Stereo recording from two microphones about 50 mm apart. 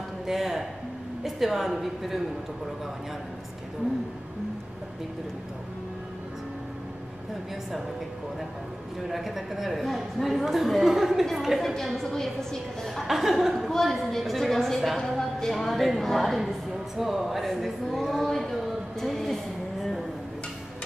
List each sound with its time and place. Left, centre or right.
0.3 s a woman's voice: centre
9.1 s a woman's voice: centre
13.0 s a woman's voice: centre